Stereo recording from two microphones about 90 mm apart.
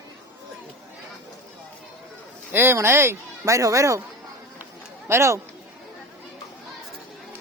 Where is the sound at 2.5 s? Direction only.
25° right (ahead or behind).